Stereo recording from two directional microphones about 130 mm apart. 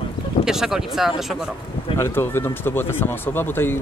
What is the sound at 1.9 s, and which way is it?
Speech, 20° left (ahead or behind).